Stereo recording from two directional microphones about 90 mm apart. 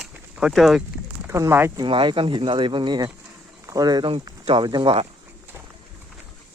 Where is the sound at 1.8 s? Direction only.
65° right (ahead or behind); by 4.1 s 50° right (ahead or behind).